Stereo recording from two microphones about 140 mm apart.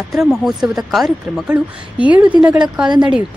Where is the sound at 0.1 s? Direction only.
5° right (ahead or behind).